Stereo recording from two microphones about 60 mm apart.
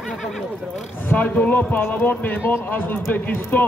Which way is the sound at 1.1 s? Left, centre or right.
Left.